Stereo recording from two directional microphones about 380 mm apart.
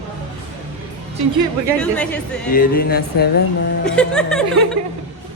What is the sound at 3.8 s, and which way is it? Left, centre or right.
Speech, centre.